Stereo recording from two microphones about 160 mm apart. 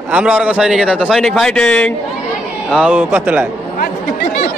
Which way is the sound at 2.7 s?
5° right (ahead or behind).